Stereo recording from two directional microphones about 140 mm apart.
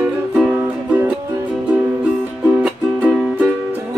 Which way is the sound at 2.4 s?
10° right (ahead or behind).